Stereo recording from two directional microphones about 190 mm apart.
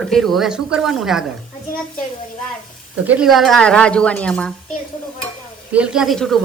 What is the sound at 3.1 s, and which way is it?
A woman's voice, 5° right (ahead or behind).